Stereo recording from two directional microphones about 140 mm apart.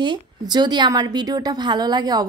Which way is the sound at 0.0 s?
30° right (ahead or behind).